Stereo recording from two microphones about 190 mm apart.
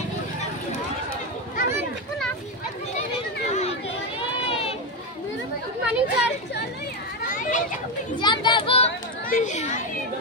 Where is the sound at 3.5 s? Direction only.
35° left (ahead or behind).